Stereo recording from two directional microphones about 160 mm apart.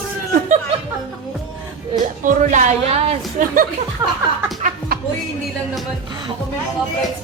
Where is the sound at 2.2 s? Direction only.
50° right (ahead or behind).